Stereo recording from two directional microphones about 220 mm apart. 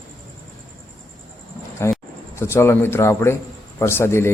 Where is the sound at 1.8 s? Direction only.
10° left (ahead or behind).